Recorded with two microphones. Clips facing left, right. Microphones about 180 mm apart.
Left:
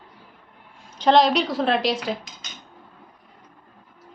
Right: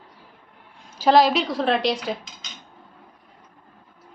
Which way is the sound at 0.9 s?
5° right (ahead or behind).